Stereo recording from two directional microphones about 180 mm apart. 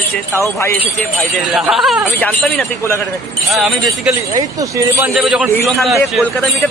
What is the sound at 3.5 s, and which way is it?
Speech, centre (ahead or behind).